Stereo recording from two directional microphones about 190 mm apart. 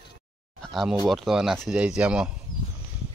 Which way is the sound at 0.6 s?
Centre (ahead or behind).